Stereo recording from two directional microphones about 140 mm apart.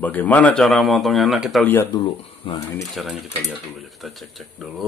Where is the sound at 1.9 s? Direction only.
30° left (ahead or behind).